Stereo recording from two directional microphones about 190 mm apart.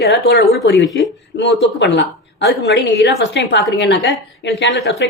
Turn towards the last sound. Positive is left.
turn(degrees=65)  # may be behind; listen again after turning